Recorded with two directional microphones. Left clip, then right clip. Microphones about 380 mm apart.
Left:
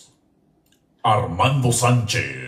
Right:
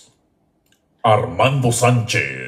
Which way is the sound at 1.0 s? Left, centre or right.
Centre.